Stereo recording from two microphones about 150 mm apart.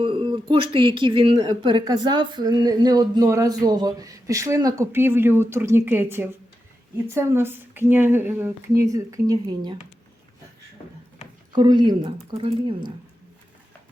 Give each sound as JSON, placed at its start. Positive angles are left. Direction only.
{"t": 0.0, "sound": "speech", "side_deg": -35}
{"t": 11.5, "sound": "speech", "side_deg": -30}